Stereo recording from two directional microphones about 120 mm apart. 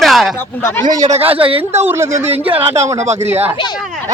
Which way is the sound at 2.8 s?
65° right (ahead or behind).